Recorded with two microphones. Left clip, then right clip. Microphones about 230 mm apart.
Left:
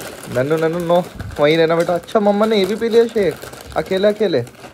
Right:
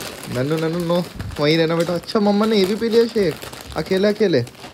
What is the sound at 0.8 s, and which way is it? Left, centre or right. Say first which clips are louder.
Speech: left 5 dB; right.